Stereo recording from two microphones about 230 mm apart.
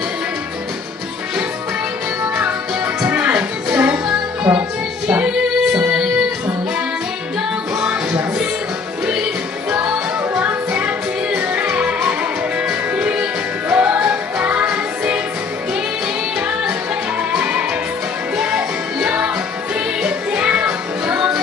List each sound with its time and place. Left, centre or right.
2.3 s music: centre
7.7 s music: centre
9.7 s music: centre
16.3 s music: centre